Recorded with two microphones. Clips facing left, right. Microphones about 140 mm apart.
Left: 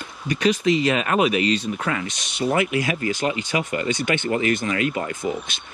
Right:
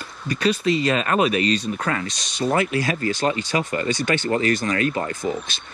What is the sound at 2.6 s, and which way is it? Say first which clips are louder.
Speech: left 1 dB; 20° left (ahead or behind).